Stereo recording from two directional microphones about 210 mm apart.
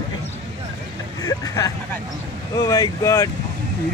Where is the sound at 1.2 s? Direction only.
15° left (ahead or behind).